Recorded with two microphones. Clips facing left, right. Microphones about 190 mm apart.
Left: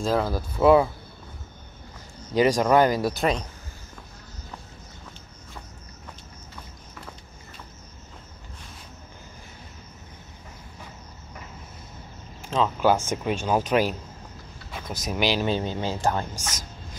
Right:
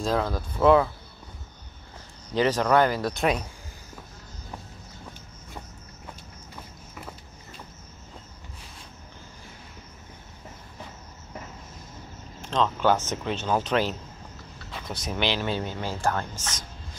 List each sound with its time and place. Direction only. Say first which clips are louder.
0.0 s speech: left 2 dB; 5° left (ahead or behind)
2.3 s speech: left 2 dB; 10° left (ahead or behind)
12.4 s speech: left 1 dB; 5° left (ahead or behind)
15.0 s speech: left 3 dB; 10° left (ahead or behind)